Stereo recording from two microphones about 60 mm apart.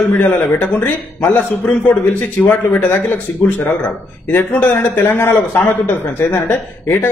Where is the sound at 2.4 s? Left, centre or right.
Centre.